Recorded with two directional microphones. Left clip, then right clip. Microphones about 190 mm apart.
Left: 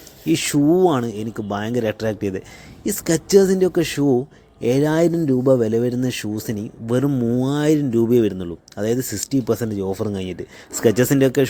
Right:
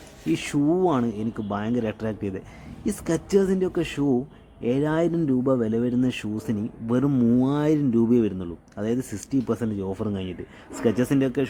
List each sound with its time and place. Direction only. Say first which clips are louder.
0.3 s speech: left 6 dB; 15° left (ahead or behind)